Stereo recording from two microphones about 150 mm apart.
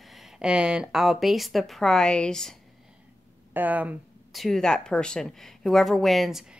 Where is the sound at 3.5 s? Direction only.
10° right (ahead or behind).